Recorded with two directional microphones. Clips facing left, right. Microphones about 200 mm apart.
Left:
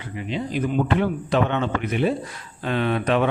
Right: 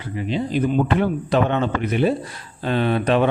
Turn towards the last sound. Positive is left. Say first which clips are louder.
# right 3 dB
turn(degrees=-35)  # may be behind; listen again after turning